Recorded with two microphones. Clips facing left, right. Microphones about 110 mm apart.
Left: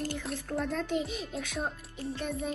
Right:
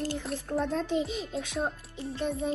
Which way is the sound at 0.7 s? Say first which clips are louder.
Right 3 dB; 30° right (ahead or behind).